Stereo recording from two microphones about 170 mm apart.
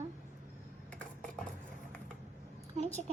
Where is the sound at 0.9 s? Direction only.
5° left (ahead or behind).